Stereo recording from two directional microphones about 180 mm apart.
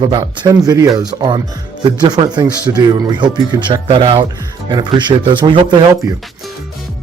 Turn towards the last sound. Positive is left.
turn(degrees=-25)  # may be behind; listen again after turning